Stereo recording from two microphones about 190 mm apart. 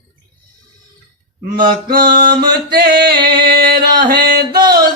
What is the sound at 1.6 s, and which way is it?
Music, 50° right (ahead or behind).